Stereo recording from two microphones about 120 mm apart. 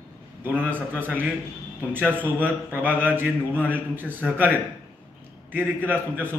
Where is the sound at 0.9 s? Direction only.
15° right (ahead or behind).